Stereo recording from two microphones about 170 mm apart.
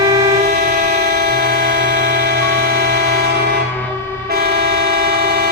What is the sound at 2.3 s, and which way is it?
Music, 65° right (ahead or behind).